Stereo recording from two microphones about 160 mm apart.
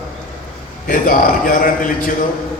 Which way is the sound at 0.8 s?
60° left (ahead or behind).